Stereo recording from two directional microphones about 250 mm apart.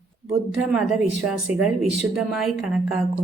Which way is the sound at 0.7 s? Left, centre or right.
Centre.